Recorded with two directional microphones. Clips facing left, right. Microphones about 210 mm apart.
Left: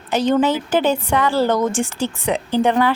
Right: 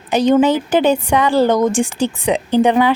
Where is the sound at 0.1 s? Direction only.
15° right (ahead or behind).